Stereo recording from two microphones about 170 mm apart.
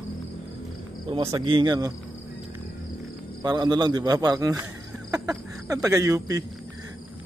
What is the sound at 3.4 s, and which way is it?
Speech, 25° right (ahead or behind).